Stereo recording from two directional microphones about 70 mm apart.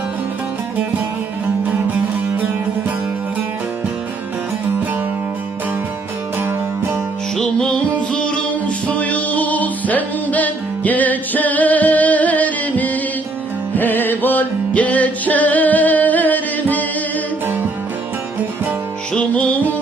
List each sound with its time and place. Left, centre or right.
1.6 s music: right
6.4 s music: right
7.3 s music: centre
8.9 s music: centre
17.4 s music: right
19.3 s music: left